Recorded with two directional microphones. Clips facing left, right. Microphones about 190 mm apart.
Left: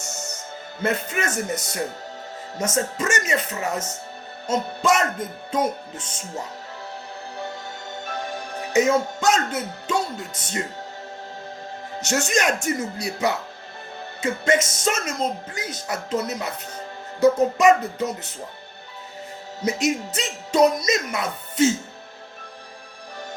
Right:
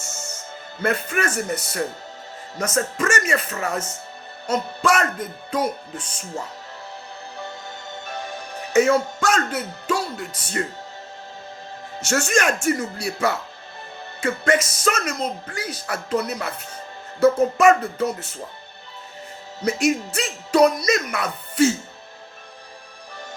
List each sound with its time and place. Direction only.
0.8 s speech: 20° left (ahead or behind)
8.7 s speech: 20° left (ahead or behind)
11.9 s speech: 20° left (ahead or behind)
17.6 s speech: 20° left (ahead or behind)
19.6 s speech: 20° left (ahead or behind)